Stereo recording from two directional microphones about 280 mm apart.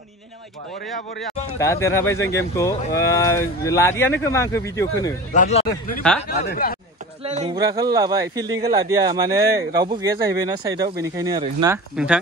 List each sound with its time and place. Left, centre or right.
1.6 s speech: centre
5.3 s speech: left
7.2 s speech: right